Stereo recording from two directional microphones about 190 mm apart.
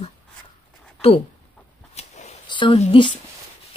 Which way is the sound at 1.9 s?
35° left (ahead or behind).